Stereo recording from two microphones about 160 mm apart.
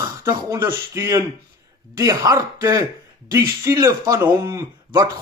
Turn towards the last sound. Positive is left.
turn(degrees=-25)  # may be behind; listen again after turning